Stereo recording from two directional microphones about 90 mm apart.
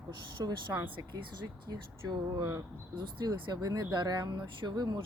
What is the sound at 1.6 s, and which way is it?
Speech, 50° right (ahead or behind).